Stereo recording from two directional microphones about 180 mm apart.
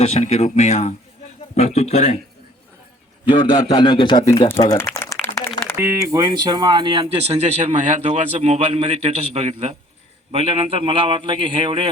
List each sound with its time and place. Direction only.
0.0 s speech: 35° left (ahead or behind)
3.2 s a man's voice: 25° left (ahead or behind)
5.5 s a sound: 5° left (ahead or behind)
5.8 s a man's voice: 15° right (ahead or behind)